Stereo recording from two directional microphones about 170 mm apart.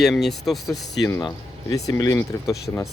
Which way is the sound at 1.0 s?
25° left (ahead or behind).